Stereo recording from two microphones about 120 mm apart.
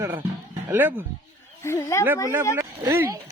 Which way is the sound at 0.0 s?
20° right (ahead or behind).